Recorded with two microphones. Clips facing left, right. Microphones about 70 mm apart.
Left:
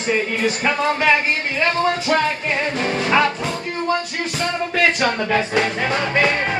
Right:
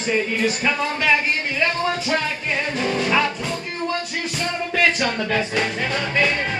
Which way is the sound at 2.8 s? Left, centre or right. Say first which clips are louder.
Left 3 dB; left.